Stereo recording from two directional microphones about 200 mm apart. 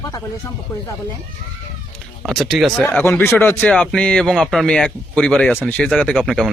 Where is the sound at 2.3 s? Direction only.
Centre (ahead or behind).